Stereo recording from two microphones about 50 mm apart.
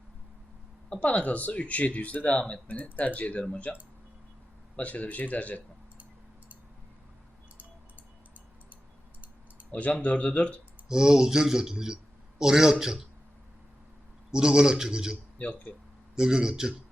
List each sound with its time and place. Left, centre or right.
0.9 s speech: left
2.9 s speech: left
4.8 s speech: left
9.7 s speech: left
10.8 s speech: centre
14.3 s speech: centre
15.4 s speech: left
16.1 s speech: centre